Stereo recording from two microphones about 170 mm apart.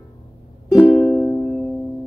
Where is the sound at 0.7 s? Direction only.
10° left (ahead or behind).